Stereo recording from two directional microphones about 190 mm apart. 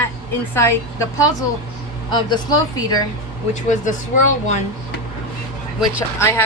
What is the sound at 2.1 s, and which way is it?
Speech, 20° left (ahead or behind).